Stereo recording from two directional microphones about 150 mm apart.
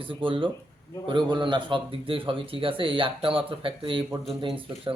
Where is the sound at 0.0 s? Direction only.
35° right (ahead or behind).